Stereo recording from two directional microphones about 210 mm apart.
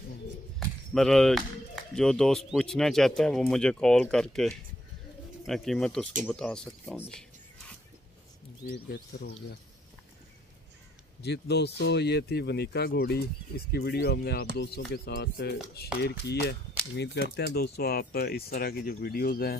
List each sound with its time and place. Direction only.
0.6 s a sound: centre (ahead or behind)
2.0 s speech: centre (ahead or behind)
8.7 s speech: 50° left (ahead or behind)
11.2 s speech: 55° left (ahead or behind)